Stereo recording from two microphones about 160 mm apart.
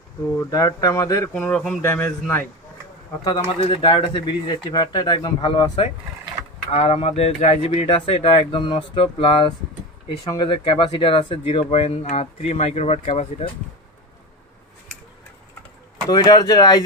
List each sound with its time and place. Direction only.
0.5 s speech: 20° left (ahead or behind)
1.3 s a man's voice: 5° left (ahead or behind)
3.3 s speech: 30° left (ahead or behind)
6.7 s speech: 40° left (ahead or behind)
16.1 s speech: 25° left (ahead or behind)